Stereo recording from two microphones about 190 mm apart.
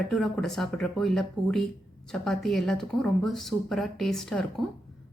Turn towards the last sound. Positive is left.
turn(degrees=0)  # may be behind; listen again after turning